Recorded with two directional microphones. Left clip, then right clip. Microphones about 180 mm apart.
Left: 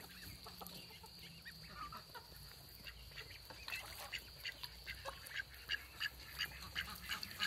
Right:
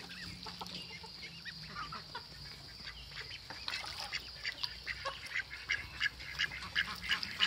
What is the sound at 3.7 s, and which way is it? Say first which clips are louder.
Duck: right 5 dB; 35° left (ahead or behind).